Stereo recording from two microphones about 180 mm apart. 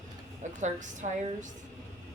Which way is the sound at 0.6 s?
45° right (ahead or behind).